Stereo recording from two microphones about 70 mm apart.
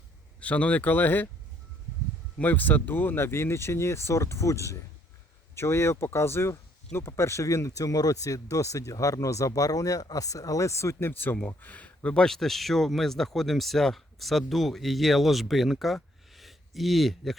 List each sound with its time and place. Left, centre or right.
0.3 s speech: centre
2.4 s speech: left
11.1 s speech: left; by 16.0 s centre
16.3 s a sound: centre